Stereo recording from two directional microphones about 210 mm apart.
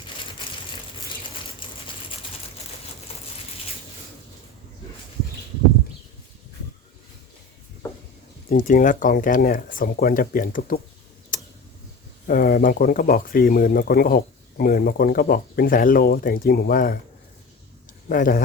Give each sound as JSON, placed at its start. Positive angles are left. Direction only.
{"t": 1.6, "sound": "a sound", "side_deg": 25}
{"t": 8.4, "sound": "speech", "side_deg": 40}
{"t": 11.3, "sound": "tick", "side_deg": 40}
{"t": 12.3, "sound": "speech", "side_deg": 45}
{"t": 18.1, "sound": "speech", "side_deg": 40}